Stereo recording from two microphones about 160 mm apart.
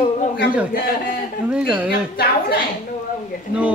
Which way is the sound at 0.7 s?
65° left (ahead or behind).